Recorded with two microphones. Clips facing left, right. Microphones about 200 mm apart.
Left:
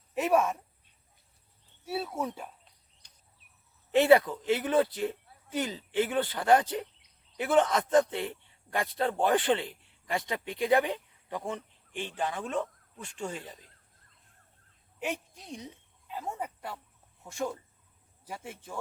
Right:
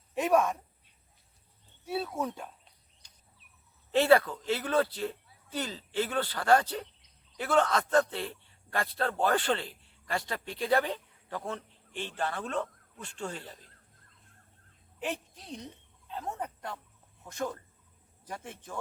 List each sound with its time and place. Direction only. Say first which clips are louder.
0.1 s speech: even; 5° left (ahead or behind)
1.8 s speech: even; 5° left (ahead or behind)
3.0 s cricket: even; 60° left (ahead or behind)
3.9 s a man's voice: left 2 dB; 20° left (ahead or behind)
14.9 s a sound: left 1 dB; 10° left (ahead or behind)
17.3 s speech: left 1 dB; 10° left (ahead or behind)